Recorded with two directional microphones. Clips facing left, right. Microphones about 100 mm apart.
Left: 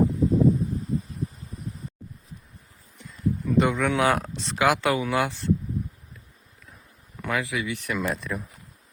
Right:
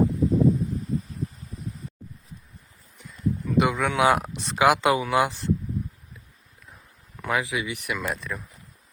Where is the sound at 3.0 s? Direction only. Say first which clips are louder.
Left 1 dB; centre (ahead or behind).